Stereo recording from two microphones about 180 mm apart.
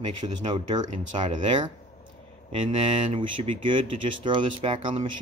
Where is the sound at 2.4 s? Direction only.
30° right (ahead or behind).